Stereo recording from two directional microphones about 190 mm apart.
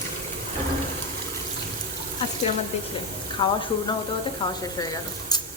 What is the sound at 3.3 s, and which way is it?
Speech, 25° left (ahead or behind).